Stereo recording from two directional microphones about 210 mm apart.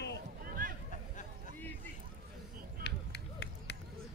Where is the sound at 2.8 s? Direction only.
55° left (ahead or behind).